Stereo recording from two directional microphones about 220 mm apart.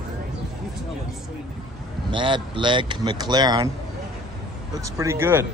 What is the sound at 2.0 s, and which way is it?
Speech, 20° right (ahead or behind).